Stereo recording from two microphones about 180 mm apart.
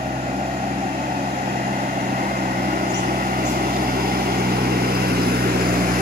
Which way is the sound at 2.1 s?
50° right (ahead or behind).